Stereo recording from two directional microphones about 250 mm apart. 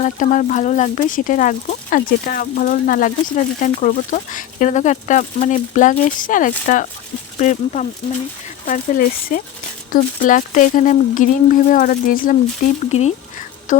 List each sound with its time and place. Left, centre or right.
0.2 s speech: left